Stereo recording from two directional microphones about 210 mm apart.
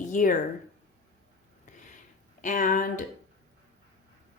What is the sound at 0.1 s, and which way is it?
Speech, 40° left (ahead or behind).